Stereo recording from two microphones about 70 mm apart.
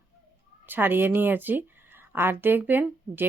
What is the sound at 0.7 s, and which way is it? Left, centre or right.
Speech, right.